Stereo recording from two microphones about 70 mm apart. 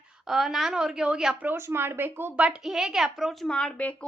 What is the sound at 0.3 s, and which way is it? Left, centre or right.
A woman's voice, centre.